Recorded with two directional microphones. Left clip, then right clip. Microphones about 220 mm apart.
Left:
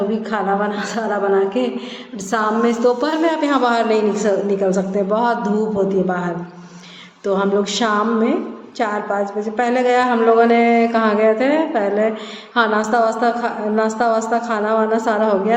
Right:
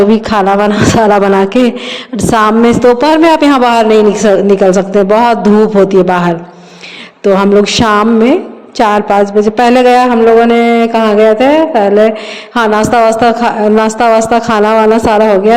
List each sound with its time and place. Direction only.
0.1 s a woman's voice: 50° right (ahead or behind)